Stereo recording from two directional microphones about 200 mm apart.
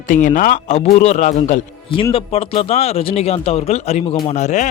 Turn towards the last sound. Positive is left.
turn(degrees=35)  # may be behind; listen again after turning